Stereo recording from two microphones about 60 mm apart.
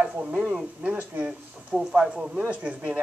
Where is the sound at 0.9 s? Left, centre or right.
Right.